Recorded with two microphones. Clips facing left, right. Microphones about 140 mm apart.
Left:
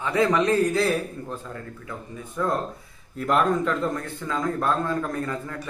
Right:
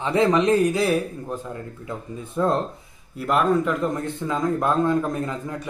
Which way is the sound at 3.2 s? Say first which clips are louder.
Even; centre (ahead or behind).